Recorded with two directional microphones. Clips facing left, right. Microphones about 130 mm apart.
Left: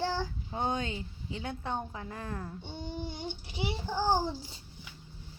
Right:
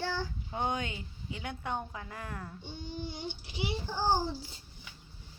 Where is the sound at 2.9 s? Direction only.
50° left (ahead or behind).